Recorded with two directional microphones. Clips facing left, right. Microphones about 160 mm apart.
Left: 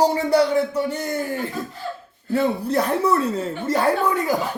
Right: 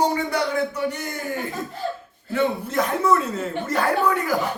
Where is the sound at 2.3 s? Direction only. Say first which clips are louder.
Left 2 dB; 35° left (ahead or behind).